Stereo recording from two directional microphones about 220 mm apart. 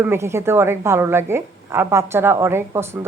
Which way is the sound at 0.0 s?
10° right (ahead or behind).